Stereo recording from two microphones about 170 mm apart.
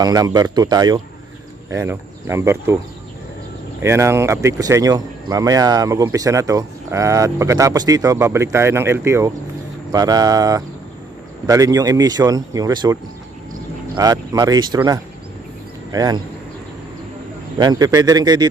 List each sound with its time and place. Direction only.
0.0 s speech: 20° right (ahead or behind)
3.8 s speech: 15° right (ahead or behind)
15.9 s speech: 25° right (ahead or behind)
17.6 s speech: 20° right (ahead or behind)